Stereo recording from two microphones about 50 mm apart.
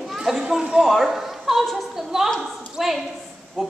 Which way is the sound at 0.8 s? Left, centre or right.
Centre.